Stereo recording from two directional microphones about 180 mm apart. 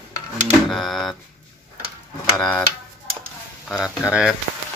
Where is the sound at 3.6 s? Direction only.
Centre (ahead or behind).